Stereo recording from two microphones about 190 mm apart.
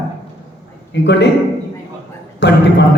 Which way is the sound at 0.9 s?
65° left (ahead or behind).